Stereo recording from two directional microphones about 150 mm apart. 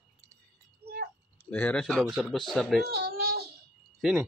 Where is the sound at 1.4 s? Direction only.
10° left (ahead or behind).